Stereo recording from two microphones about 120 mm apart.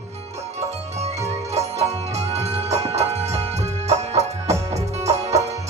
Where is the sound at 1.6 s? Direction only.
65° right (ahead or behind).